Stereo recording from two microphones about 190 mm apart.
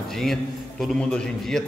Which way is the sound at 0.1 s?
Centre (ahead or behind).